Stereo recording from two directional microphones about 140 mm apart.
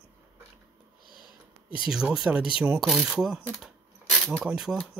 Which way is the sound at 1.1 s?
30° left (ahead or behind).